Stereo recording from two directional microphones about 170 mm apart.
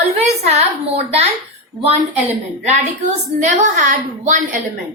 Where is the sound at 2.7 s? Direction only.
45° right (ahead or behind).